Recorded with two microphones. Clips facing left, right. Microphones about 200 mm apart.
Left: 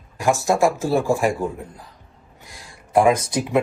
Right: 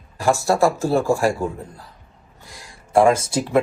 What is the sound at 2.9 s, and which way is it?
Speech, 15° left (ahead or behind).